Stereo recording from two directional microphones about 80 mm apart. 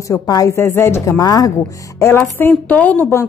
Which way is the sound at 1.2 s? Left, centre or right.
Left.